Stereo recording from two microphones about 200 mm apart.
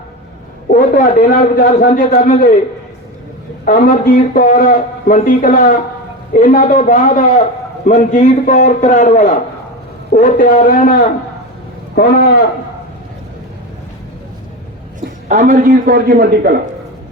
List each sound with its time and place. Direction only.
0.7 s a man's voice: 45° left (ahead or behind)
3.7 s a man's voice: 45° left (ahead or behind)
15.3 s a man's voice: 40° right (ahead or behind)